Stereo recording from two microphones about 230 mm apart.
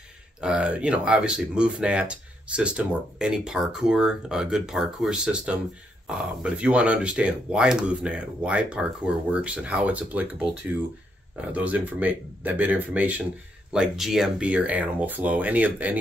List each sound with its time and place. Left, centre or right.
0.4 s speech: centre
11.5 s speech: centre